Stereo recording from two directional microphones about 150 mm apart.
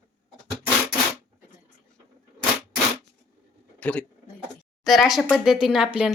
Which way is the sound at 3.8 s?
10° left (ahead or behind).